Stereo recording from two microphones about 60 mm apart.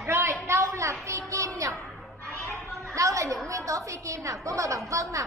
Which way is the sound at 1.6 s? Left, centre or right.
Right.